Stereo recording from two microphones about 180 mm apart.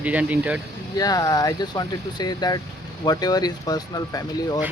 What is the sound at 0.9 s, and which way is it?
Speech, 20° left (ahead or behind).